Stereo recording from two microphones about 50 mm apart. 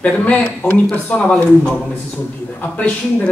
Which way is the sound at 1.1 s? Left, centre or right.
Centre.